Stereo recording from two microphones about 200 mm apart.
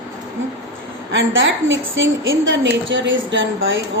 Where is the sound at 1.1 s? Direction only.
70° right (ahead or behind).